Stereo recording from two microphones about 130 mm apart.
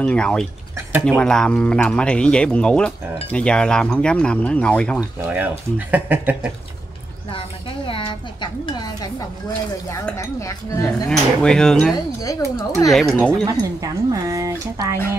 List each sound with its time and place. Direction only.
0.0 s speech: 5° left (ahead or behind)
5.3 s speech: 10° right (ahead or behind)
7.2 s a sound: 45° left (ahead or behind)
10.1 s cutlery: 25° left (ahead or behind)
11.1 s speech: 5° left (ahead or behind)
12.2 s cutlery: 25° left (ahead or behind)
13.1 s speech: 10° left (ahead or behind)
13.5 s speech: 25° right (ahead or behind)